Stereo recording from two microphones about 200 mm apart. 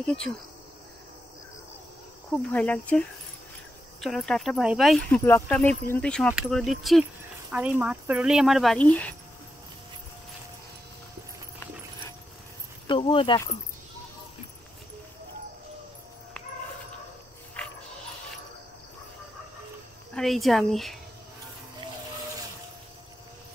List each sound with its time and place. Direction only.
0.0 s speech: 5° left (ahead or behind)
2.5 s speech: 5° left (ahead or behind)
12.8 s speech: 25° left (ahead or behind)
17.6 s music: 5° left (ahead or behind)
20.2 s speech: centre (ahead or behind)